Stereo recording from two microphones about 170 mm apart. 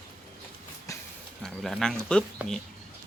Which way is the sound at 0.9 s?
20° left (ahead or behind).